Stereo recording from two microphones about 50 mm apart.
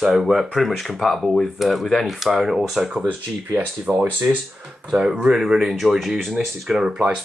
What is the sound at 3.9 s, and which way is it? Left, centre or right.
Speech, right.